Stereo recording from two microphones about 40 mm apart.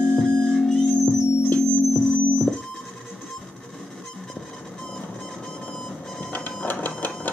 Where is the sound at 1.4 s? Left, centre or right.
Left.